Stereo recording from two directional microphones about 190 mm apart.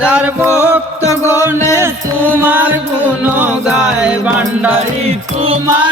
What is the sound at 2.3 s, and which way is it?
Music, 10° right (ahead or behind).